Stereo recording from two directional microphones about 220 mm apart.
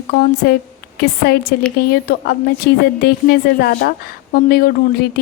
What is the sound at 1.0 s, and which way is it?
A woman's voice, 45° left (ahead or behind).